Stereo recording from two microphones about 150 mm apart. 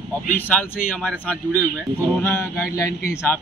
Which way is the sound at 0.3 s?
10° left (ahead or behind).